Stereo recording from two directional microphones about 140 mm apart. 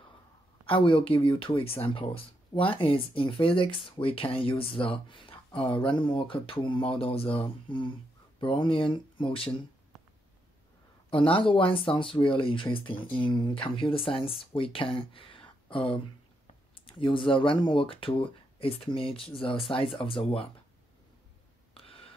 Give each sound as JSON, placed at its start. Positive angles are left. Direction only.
{"t": 0.7, "sound": "speech", "side_deg": 40}
{"t": 11.1, "sound": "speech", "side_deg": 40}
{"t": 21.7, "sound": "a sound", "side_deg": 40}